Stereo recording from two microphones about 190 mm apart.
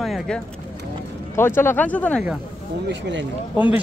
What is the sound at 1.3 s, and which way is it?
Speech, 10° left (ahead or behind).